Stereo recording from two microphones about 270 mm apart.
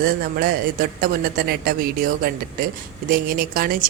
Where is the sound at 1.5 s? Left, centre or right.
Right.